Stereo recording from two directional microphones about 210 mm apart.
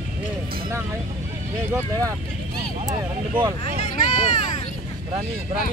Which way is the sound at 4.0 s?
35° left (ahead or behind).